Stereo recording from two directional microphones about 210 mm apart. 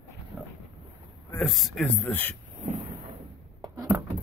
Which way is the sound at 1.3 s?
Centre (ahead or behind).